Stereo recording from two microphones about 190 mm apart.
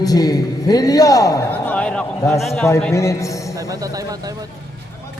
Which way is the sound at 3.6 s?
20° right (ahead or behind).